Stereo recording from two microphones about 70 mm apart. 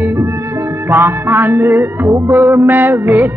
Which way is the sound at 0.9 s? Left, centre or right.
Right.